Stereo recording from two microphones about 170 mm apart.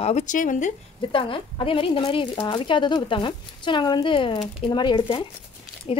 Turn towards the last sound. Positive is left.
turn(degrees=30)  # may be behind; listen again after turning